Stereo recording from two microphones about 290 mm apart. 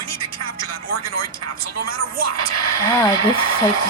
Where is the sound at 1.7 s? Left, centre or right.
Right.